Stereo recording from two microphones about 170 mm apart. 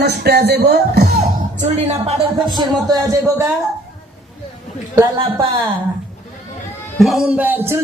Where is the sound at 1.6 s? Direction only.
40° right (ahead or behind).